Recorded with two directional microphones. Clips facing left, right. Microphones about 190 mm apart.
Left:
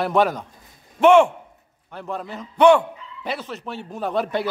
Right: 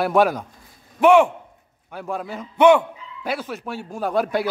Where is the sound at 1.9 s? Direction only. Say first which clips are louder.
Right 2 dB; 5° right (ahead or behind).